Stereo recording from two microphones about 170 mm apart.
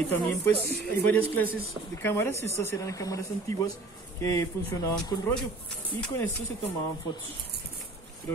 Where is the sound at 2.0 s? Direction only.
15° left (ahead or behind).